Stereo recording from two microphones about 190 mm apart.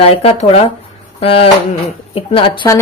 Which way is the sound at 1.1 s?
30° left (ahead or behind).